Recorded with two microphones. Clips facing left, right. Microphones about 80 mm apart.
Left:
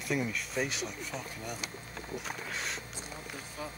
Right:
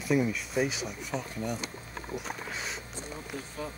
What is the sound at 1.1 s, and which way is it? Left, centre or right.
Speech, right.